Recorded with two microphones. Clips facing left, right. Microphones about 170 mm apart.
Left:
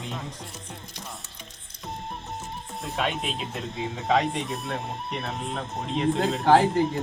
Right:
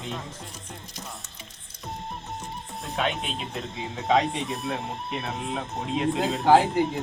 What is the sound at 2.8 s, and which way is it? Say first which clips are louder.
Speech: even; centre (ahead or behind).